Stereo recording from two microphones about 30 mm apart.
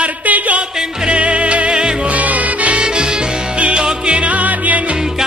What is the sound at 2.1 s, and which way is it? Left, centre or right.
Music, right.